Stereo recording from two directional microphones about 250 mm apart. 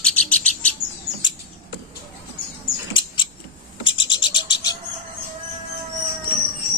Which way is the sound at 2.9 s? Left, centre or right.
Centre.